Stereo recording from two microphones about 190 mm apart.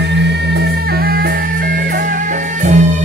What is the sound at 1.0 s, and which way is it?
Music, 50° right (ahead or behind).